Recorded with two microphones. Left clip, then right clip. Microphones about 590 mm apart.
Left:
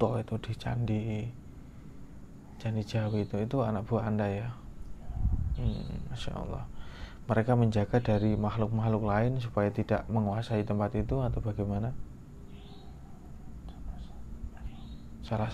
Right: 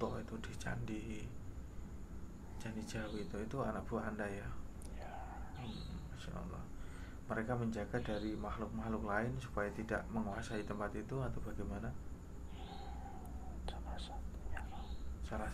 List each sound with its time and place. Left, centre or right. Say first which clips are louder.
0.0 s a man's voice: left 12 dB; left
2.6 s a man's voice: left 10 dB; left
7.2 s a man's voice: left 12 dB; left
15.2 s speech: left 10 dB; left